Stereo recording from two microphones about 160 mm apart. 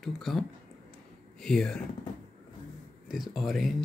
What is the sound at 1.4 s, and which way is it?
Speech, 5° left (ahead or behind).